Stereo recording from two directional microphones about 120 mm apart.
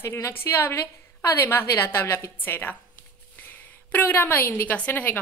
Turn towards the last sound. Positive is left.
turn(degrees=15)  # may be behind; listen again after turning